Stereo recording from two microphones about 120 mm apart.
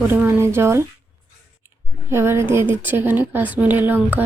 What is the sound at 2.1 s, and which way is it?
A woman's voice, 20° right (ahead or behind).